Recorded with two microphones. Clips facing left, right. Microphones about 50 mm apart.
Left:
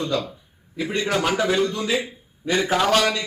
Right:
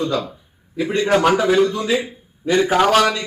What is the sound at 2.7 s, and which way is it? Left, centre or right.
Speech, centre.